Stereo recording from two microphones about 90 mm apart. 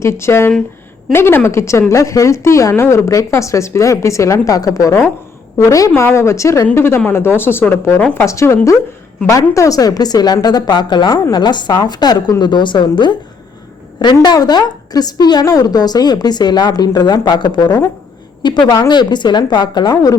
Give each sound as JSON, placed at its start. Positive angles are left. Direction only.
{"t": 0.0, "sound": "a woman's voice", "side_deg": 30}
{"t": 5.9, "sound": "a woman's voice", "side_deg": 25}
{"t": 8.1, "sound": "a woman's voice", "side_deg": 35}